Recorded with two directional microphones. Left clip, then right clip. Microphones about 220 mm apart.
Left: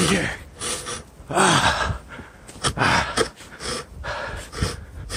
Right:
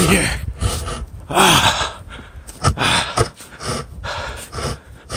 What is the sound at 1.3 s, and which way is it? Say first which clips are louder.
Gasp: right 5 dB; 30° right (ahead or behind).